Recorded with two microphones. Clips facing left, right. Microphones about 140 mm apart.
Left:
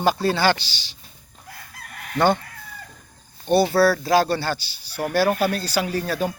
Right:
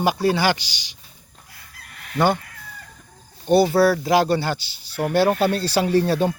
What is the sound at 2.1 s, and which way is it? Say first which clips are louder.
Speech: even; 10° right (ahead or behind).